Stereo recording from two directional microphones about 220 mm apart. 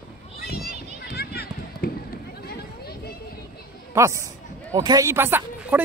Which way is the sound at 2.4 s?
45° left (ahead or behind).